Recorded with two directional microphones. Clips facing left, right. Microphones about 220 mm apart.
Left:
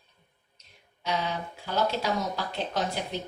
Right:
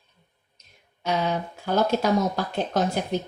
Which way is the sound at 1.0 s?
50° right (ahead or behind).